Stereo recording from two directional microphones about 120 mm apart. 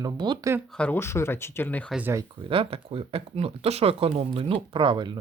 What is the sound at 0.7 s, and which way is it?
Speech, 10° left (ahead or behind).